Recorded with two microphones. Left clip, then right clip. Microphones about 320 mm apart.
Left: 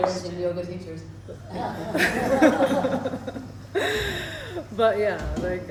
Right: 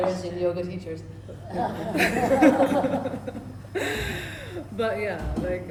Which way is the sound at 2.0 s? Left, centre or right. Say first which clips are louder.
Even; centre.